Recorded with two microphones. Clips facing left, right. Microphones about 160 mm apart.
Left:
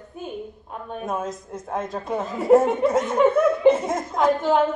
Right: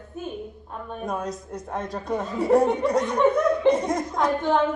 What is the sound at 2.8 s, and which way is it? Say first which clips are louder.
Speech: left 2 dB; 20° left (ahead or behind).